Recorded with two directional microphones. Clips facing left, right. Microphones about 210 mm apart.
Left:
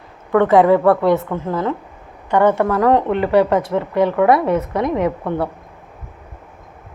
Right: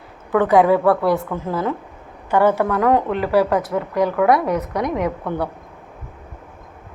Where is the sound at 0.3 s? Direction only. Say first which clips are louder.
Left 2 dB; centre (ahead or behind).